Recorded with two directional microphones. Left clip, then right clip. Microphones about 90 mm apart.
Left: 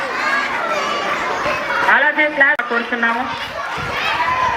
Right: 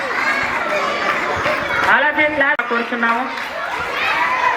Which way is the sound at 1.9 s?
20° left (ahead or behind).